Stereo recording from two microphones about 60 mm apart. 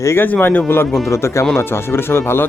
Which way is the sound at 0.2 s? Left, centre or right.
Left.